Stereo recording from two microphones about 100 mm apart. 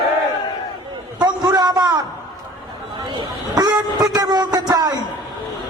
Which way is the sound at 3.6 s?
40° right (ahead or behind).